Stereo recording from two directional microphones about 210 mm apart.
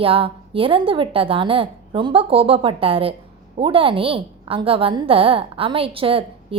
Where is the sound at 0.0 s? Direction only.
25° right (ahead or behind).